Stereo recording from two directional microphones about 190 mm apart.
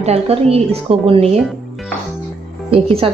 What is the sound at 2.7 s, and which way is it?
Speech, 30° right (ahead or behind).